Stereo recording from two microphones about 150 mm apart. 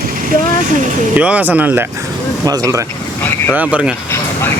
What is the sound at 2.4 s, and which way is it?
Speech, 25° right (ahead or behind).